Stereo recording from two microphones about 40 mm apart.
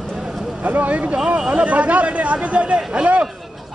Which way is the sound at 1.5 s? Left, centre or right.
Right.